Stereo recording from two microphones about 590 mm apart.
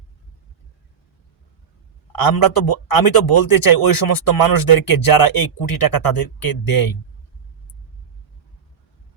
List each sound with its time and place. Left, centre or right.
2.1 s speech: left